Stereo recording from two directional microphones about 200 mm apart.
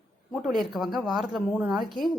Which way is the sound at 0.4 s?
Centre (ahead or behind).